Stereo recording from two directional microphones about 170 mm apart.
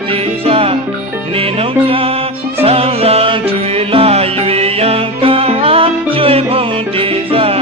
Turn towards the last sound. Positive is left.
turn(degrees=-35)  # may be behind; listen again after turning